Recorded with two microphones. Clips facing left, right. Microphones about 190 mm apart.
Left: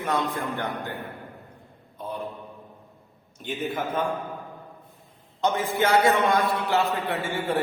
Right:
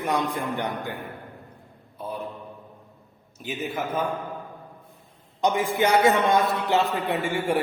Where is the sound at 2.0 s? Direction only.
5° right (ahead or behind).